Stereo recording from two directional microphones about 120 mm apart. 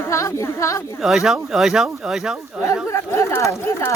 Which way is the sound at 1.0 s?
Centre (ahead or behind).